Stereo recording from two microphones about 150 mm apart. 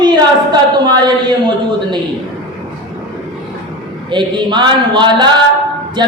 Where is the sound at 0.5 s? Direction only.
30° right (ahead or behind).